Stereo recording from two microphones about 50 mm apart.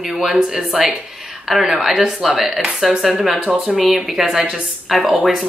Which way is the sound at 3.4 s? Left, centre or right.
Right.